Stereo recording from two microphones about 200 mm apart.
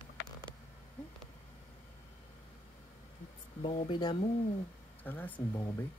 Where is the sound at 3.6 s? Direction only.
25° left (ahead or behind).